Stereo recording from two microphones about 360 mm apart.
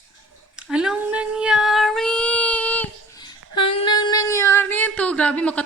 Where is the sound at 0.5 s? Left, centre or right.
Centre.